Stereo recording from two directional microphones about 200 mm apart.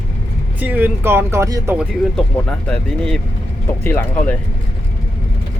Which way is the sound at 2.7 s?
5° left (ahead or behind).